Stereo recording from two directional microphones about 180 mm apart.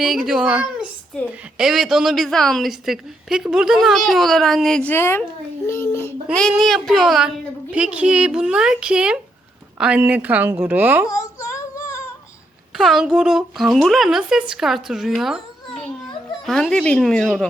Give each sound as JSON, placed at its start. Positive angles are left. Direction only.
{"t": 0.0, "sound": "a woman's voice", "side_deg": 0}
{"t": 1.1, "sound": "a child's voice", "side_deg": 5}
{"t": 6.5, "sound": "a woman's voice", "side_deg": 0}
{"t": 11.1, "sound": "child singing", "side_deg": 15}
{"t": 12.7, "sound": "a woman's voice", "side_deg": 0}